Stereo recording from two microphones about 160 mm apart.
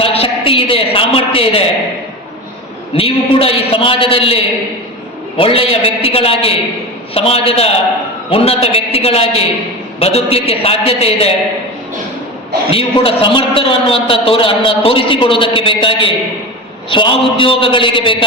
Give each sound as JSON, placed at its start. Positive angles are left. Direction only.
{"t": 0.0, "sound": "a woman's voice", "side_deg": 35}
{"t": 2.9, "sound": "a woman's voice", "side_deg": 35}
{"t": 12.7, "sound": "a woman's voice", "side_deg": 35}